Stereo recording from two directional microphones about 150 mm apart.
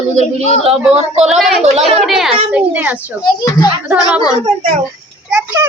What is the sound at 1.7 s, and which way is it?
Speech, 45° right (ahead or behind).